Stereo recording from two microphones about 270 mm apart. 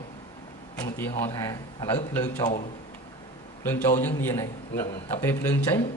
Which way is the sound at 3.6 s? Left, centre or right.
Centre.